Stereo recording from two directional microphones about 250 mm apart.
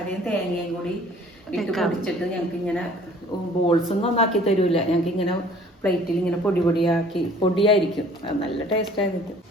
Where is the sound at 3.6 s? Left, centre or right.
Left.